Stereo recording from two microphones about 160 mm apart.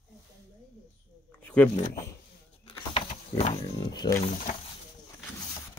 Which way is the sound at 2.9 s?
35° left (ahead or behind).